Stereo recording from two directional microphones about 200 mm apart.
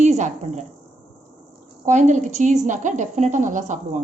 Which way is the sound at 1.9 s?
35° right (ahead or behind).